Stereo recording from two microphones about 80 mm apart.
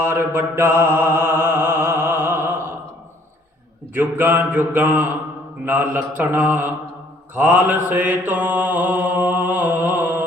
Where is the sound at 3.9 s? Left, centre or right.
Right.